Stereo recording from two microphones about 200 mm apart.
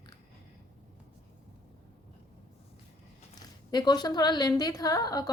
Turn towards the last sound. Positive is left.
turn(degrees=20)  # may be behind; listen again after turning